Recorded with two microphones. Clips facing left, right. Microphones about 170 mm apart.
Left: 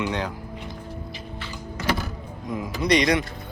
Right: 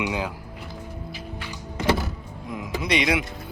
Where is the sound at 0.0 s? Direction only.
5° right (ahead or behind).